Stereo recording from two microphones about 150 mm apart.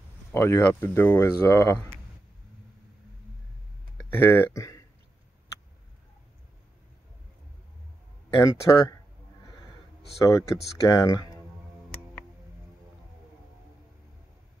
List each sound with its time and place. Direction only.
0.3 s speech: 15° left (ahead or behind)
4.1 s speech: 15° left (ahead or behind)
8.4 s speech: 20° left (ahead or behind)
10.2 s speech: 20° left (ahead or behind)